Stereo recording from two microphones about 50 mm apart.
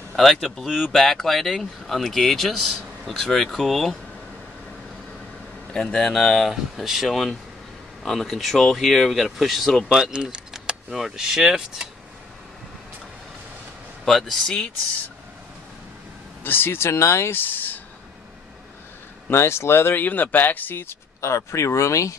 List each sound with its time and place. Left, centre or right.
0.1 s speech: centre
5.7 s speech: centre
9.8 s speech: centre
14.0 s speech: centre
16.4 s speech: left
17.3 s speech: left
19.3 s speech: left
20.0 s speech: left
20.8 s speech: left